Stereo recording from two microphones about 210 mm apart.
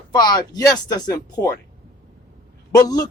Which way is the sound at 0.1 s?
20° left (ahead or behind).